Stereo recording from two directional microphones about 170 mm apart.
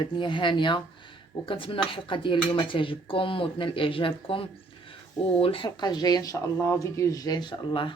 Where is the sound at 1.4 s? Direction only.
30° left (ahead or behind).